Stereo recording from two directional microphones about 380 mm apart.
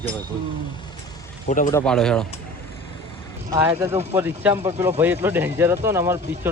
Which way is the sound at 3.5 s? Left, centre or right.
Centre.